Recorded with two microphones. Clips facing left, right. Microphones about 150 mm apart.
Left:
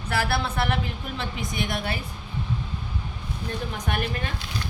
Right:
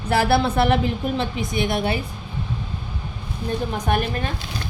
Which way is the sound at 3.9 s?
35° right (ahead or behind).